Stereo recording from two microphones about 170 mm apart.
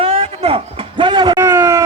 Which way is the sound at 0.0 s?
35° right (ahead or behind).